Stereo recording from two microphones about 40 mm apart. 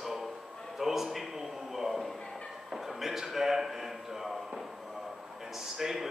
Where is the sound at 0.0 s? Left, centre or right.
Centre.